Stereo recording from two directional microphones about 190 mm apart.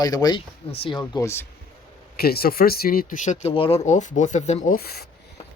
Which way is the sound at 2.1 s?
55° left (ahead or behind).